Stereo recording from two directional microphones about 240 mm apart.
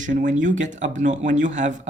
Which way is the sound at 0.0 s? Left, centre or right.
Right.